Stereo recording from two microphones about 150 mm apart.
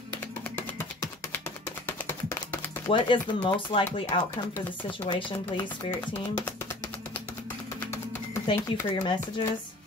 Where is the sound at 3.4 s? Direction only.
35° left (ahead or behind).